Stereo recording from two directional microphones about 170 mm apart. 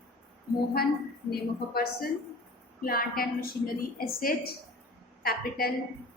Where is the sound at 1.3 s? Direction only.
65° left (ahead or behind).